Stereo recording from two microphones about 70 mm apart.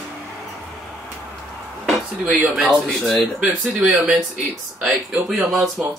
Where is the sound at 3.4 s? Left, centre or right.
Centre.